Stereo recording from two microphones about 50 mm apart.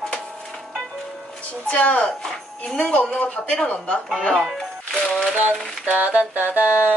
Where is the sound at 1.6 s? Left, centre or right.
Left.